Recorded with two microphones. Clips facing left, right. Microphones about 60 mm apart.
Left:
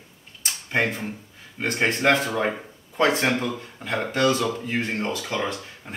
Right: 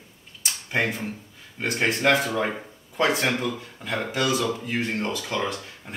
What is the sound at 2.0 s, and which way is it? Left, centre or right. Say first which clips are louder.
A man's voice: left 1 dB; centre.